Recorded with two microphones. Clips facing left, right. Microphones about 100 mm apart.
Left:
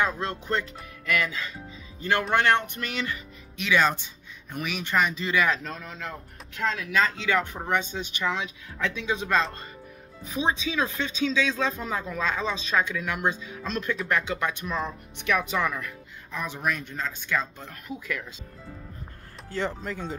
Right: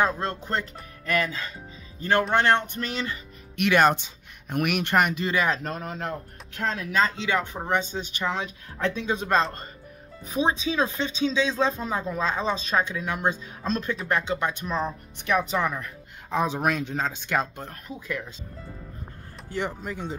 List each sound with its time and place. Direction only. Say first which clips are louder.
0.0 s speech: right 2 dB; 40° right (ahead or behind)
3.5 s speech: right 4 dB; 60° right (ahead or behind)
5.2 s speech: even; 35° right (ahead or behind)
5.6 s speech: right 5 dB; 50° right (ahead or behind); by 7.6 s 20° right (ahead or behind)
7.6 s speech: right 1 dB; 30° right (ahead or behind)
16.3 s speech: right 6 dB; 90° right
17.8 s speech: even; 25° right (ahead or behind)
19.5 s speech: even; 15° right (ahead or behind)